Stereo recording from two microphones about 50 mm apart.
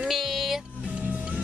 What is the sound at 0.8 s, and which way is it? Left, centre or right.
Music, right.